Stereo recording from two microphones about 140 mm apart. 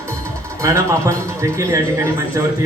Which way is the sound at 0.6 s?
20° right (ahead or behind).